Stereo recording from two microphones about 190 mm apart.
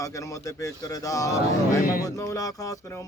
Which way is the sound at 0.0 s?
15° left (ahead or behind).